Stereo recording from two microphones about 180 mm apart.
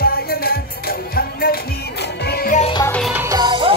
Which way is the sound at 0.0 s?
55° left (ahead or behind).